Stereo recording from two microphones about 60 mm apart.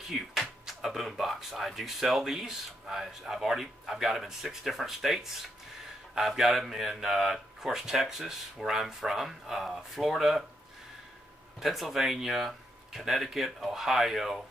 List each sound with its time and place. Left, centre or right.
0.1 s speech: centre
11.6 s speech: centre